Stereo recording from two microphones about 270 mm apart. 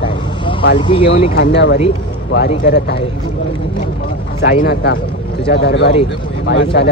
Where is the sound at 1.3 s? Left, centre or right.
Left.